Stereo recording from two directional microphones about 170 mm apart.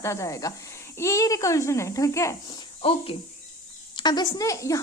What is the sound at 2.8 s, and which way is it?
A woman's voice, 35° left (ahead or behind).